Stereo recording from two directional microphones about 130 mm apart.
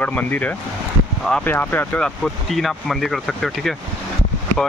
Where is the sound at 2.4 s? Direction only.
Centre (ahead or behind).